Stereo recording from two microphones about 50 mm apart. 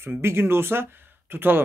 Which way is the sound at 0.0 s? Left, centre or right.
Right.